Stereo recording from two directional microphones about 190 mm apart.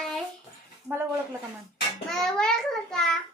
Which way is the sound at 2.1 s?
5° left (ahead or behind).